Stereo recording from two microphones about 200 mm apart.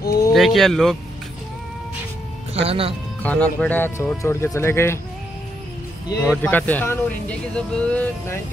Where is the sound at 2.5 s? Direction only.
30° right (ahead or behind).